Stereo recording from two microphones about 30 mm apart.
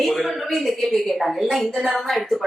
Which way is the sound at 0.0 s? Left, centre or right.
Centre.